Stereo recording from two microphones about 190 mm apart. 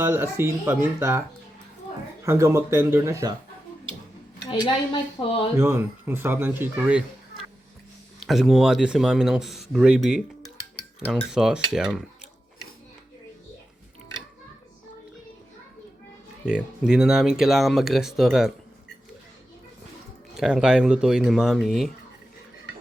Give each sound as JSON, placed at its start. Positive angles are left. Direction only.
{"t": 0.0, "sound": "speech", "side_deg": -10}
{"t": 2.2, "sound": "speech", "side_deg": -15}
{"t": 5.2, "sound": "speech", "side_deg": 20}
{"t": 5.5, "sound": "speech", "side_deg": -15}
{"t": 16.5, "sound": "speech", "side_deg": -5}
{"t": 20.3, "sound": "speech", "side_deg": -5}